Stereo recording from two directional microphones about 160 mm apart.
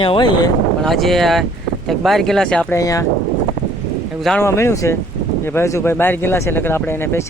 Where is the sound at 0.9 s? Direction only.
Centre (ahead or behind).